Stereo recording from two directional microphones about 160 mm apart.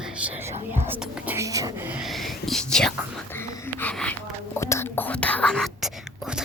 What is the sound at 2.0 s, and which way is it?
Speech, centre (ahead or behind).